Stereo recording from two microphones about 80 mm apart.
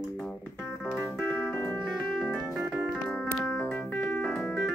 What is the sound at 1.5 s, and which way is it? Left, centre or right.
Music, left.